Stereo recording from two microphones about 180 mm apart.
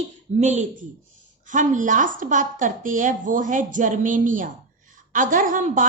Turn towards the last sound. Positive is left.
turn(degrees=-45)  # may be behind; listen again after turning